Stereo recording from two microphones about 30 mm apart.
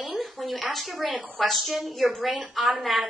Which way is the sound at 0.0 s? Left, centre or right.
Centre.